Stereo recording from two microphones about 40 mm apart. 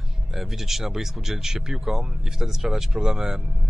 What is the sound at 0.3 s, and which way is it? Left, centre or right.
Speech, centre.